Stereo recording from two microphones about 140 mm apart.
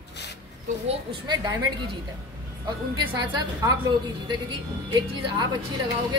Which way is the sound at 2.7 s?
30° right (ahead or behind).